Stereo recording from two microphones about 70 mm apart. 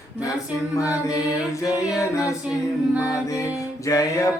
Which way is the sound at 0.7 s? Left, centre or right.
Left.